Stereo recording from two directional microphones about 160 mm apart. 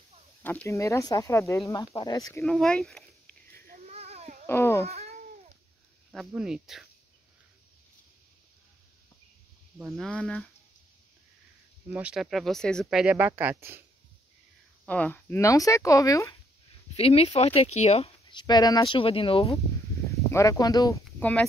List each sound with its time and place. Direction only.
0.4 s speech: 10° left (ahead or behind)
2.4 s speech: 5° left (ahead or behind)
3.7 s a sound: 45° right (ahead or behind)
4.5 s a sound: 15° left (ahead or behind)
4.8 s cat: 40° right (ahead or behind)
6.1 s speech: 5° right (ahead or behind)
9.8 s speech: centre (ahead or behind)
11.9 s speech: 5° right (ahead or behind)
13.0 s speech: 10° right (ahead or behind)
14.9 s speech: 10° left (ahead or behind)
16.9 s speech: 40° left (ahead or behind)
18.3 s speech: 25° left (ahead or behind)
20.1 s speech: 20° left (ahead or behind)
21.2 s speech: 10° left (ahead or behind)